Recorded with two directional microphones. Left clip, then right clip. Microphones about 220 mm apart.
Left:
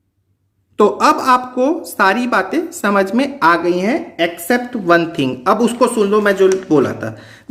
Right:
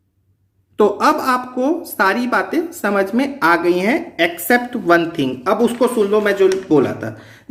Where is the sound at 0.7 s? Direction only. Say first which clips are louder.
Left 2 dB; 10° left (ahead or behind).